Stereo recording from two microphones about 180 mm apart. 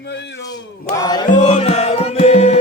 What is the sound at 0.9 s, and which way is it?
Chant, 25° left (ahead or behind).